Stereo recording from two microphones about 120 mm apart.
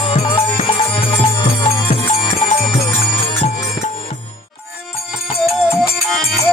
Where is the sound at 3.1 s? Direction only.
55° left (ahead or behind).